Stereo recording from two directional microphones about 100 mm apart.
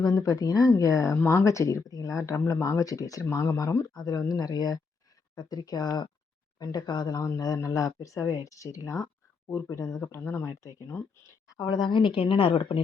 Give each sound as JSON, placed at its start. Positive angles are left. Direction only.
{"t": 0.0, "sound": "speech", "side_deg": 35}